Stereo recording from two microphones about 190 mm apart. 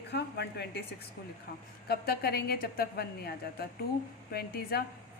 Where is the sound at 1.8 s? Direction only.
55° left (ahead or behind).